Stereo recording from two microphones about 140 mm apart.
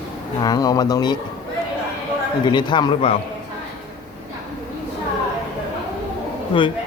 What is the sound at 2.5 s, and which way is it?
Speech, 30° left (ahead or behind).